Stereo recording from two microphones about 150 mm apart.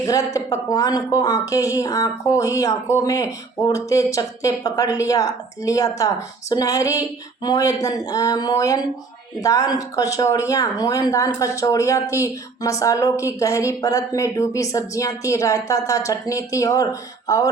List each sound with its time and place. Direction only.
0.0 s speech: 20° left (ahead or behind)